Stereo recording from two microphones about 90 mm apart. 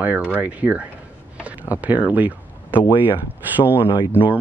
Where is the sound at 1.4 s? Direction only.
15° right (ahead or behind).